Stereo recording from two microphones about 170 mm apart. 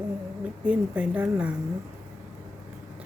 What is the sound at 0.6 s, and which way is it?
Speech, 5° right (ahead or behind).